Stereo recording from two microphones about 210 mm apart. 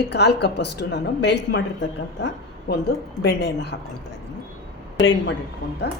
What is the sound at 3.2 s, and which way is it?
Speech, 50° left (ahead or behind).